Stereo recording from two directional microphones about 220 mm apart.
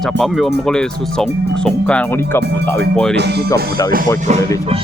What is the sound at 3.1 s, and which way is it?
Speech, 50° right (ahead or behind).